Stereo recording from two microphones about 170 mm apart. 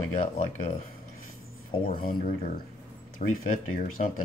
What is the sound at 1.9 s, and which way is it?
Speech, 55° left (ahead or behind).